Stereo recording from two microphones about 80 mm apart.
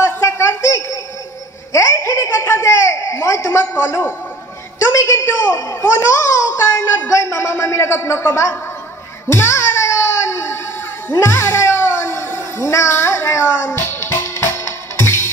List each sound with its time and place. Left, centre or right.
0.0 s music: left
1.7 s a sound: left
9.3 s music: left